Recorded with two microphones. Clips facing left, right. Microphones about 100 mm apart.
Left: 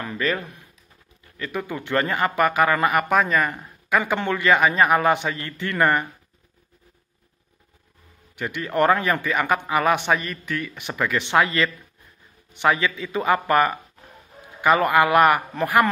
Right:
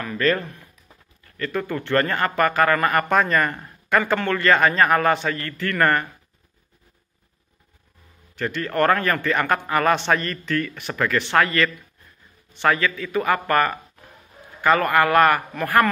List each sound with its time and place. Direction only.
0.2 s a man's voice: 10° left (ahead or behind)
4.0 s a man's voice: 15° left (ahead or behind)
8.4 s a man's voice: 15° left (ahead or behind)